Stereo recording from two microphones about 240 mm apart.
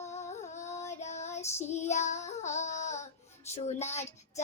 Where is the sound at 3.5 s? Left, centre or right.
Left.